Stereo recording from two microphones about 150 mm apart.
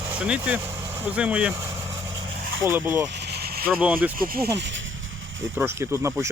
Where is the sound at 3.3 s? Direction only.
90° right.